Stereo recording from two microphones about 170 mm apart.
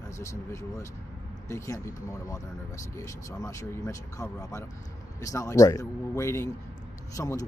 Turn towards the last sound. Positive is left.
turn(degrees=20)  # may be behind; listen again after turning